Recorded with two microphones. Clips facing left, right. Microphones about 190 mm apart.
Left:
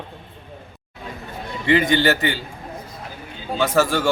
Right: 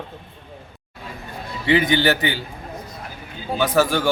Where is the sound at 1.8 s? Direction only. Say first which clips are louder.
Even; 20° right (ahead or behind).